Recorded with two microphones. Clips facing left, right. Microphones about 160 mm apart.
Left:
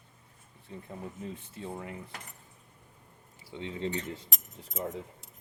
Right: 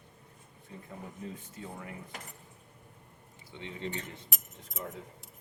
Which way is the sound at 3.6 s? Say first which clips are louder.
Left 5 dB; 30° left (ahead or behind).